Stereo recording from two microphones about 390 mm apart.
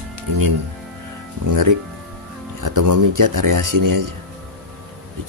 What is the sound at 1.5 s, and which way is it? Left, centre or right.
Speech, right.